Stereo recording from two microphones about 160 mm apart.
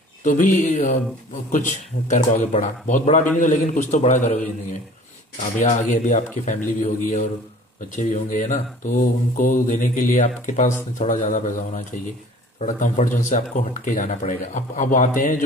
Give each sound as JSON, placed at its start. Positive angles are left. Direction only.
{"t": 0.2, "sound": "speech", "side_deg": 55}
{"t": 5.6, "sound": "speech", "side_deg": 50}